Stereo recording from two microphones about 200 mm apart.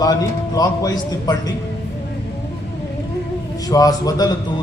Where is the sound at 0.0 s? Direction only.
20° left (ahead or behind).